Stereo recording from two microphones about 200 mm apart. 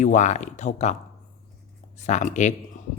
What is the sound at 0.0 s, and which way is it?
Speech, 35° left (ahead or behind).